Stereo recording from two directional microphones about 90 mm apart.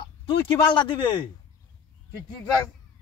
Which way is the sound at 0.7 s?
65° left (ahead or behind).